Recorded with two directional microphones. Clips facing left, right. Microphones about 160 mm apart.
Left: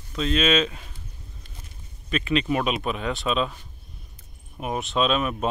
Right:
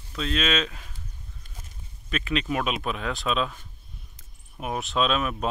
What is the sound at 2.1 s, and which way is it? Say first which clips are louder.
Speech: left 4 dB; centre (ahead or behind).